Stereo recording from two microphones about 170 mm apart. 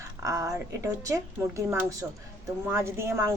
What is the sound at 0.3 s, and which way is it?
A woman's voice, 20° right (ahead or behind).